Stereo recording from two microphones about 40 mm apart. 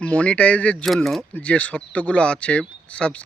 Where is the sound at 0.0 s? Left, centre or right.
Left.